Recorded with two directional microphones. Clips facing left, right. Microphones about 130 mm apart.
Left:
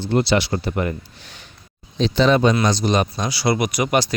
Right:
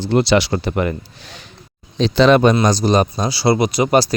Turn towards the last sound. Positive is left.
turn(degrees=-35)  # may be behind; listen again after turning